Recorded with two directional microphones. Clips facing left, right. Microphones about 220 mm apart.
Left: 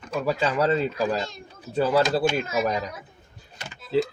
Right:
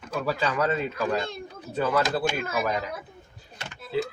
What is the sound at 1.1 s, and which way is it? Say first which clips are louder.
Speech: right 1 dB; 55° right (ahead or behind).